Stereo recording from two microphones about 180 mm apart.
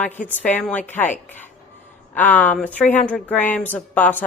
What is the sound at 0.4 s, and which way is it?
A woman's voice, 10° left (ahead or behind).